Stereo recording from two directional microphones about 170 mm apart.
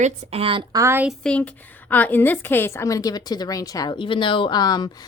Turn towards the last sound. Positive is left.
turn(degrees=25)  # may be behind; listen again after turning